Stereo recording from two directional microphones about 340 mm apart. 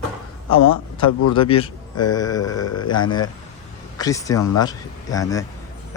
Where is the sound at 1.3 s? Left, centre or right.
Centre.